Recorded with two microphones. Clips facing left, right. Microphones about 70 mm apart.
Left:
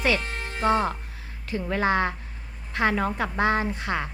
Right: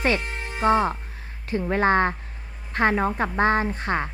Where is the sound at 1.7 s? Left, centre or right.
Right.